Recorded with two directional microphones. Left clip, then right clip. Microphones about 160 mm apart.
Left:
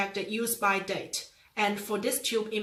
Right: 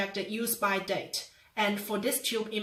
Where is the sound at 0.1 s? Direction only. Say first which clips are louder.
Left 2 dB; 20° left (ahead or behind).